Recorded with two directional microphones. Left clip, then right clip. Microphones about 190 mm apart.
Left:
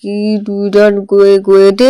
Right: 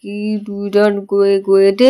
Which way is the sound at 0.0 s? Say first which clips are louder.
Left 7 dB; 15° left (ahead or behind).